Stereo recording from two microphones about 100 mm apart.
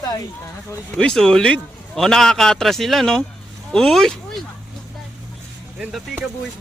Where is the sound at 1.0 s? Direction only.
10° left (ahead or behind).